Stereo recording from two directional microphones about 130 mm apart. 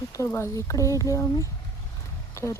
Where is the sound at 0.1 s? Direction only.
20° left (ahead or behind).